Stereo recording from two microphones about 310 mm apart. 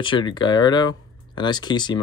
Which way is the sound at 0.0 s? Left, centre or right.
Centre.